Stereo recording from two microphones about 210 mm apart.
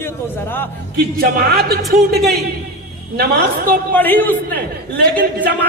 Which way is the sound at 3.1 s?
45° right (ahead or behind).